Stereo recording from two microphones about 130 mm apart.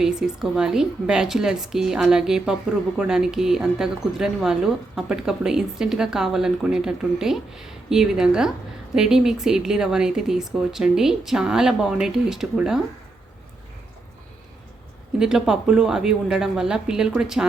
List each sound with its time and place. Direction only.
0.0 s speech: 5° right (ahead or behind)
15.2 s speech: 5° right (ahead or behind)